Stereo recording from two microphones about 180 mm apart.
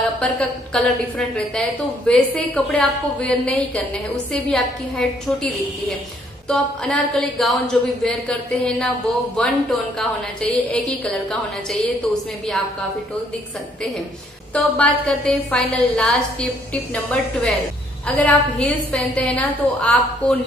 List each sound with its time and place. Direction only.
0.2 s a woman's voice: 5° left (ahead or behind)
14.5 s a woman's voice: 5° left (ahead or behind)